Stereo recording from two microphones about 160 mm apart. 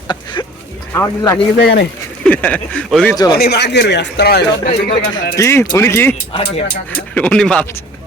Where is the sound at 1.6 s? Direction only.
90° left.